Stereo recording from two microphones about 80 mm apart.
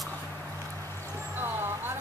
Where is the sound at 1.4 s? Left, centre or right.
Right.